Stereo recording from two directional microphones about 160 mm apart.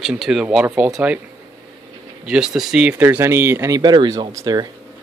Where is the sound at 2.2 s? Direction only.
5° right (ahead or behind); by 4.6 s 20° right (ahead or behind).